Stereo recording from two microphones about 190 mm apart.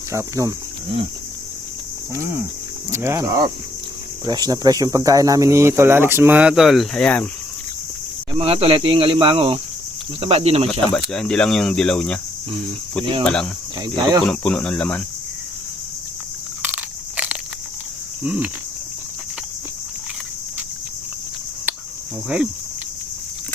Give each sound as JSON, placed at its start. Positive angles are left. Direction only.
{"t": 0.1, "sound": "speech", "side_deg": -15}
{"t": 2.9, "sound": "speech", "side_deg": -15}
{"t": 8.3, "sound": "speech", "side_deg": -30}
{"t": 10.9, "sound": "speech", "side_deg": 5}
{"t": 13.2, "sound": "speech", "side_deg": 5}
{"t": 13.8, "sound": "speech", "side_deg": -20}
{"t": 14.3, "sound": "speech", "side_deg": 5}
{"t": 16.6, "sound": "biting", "side_deg": -10}
{"t": 18.2, "sound": "speech", "side_deg": -5}